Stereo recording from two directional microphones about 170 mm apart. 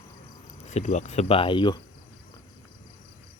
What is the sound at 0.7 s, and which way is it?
Speech, 45° left (ahead or behind).